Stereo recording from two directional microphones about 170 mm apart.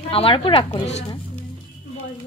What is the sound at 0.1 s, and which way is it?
Speech, 35° left (ahead or behind).